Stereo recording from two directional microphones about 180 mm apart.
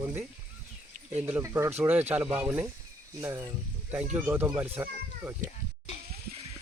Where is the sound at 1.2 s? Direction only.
10° right (ahead or behind).